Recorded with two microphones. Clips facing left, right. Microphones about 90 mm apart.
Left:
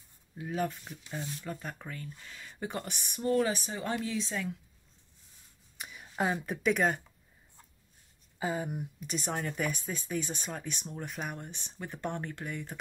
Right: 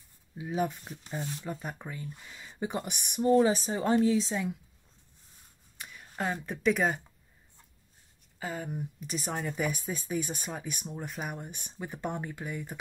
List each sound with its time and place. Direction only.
0.5 s speech: 10° right (ahead or behind)
5.8 s speech: 15° left (ahead or behind)
8.4 s speech: 15° left (ahead or behind)
9.0 s speech: centre (ahead or behind)